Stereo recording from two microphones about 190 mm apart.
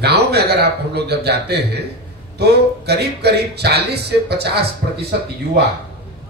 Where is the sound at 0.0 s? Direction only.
60° right (ahead or behind).